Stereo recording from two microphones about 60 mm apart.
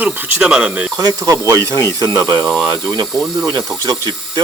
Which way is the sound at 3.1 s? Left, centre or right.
Centre.